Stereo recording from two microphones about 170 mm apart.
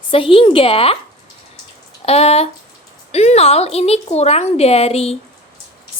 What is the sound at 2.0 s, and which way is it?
A woman's voice, 35° left (ahead or behind).